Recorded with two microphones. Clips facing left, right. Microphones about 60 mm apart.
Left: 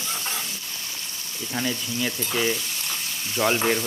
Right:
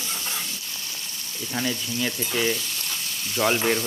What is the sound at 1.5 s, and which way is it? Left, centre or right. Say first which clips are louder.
Speech: even; centre.